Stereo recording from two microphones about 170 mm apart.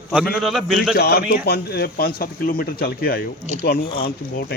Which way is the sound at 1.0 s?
65° left (ahead or behind).